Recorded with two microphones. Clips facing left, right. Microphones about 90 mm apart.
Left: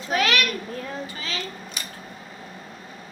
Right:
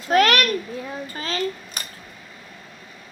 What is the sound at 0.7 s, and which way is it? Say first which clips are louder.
Speech: right 1 dB; 10° right (ahead or behind).